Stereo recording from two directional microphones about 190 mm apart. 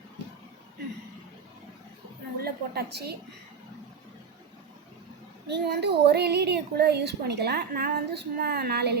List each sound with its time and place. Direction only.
2.4 s a woman's voice: 55° right (ahead or behind)
5.5 s speech: 60° right (ahead or behind)